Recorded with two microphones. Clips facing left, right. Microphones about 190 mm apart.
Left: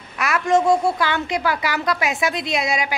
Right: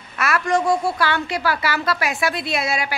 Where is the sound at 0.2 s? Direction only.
20° left (ahead or behind).